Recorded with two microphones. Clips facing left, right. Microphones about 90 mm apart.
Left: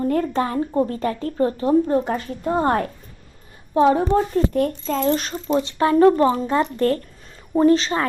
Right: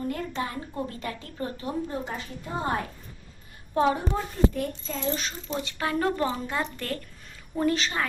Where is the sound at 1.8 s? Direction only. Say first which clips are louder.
Left 12 dB; 55° left (ahead or behind).